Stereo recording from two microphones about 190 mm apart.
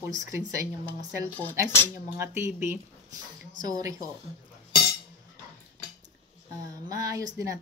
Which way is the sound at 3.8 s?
20° right (ahead or behind).